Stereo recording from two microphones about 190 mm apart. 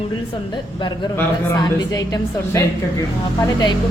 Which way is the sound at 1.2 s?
20° left (ahead or behind).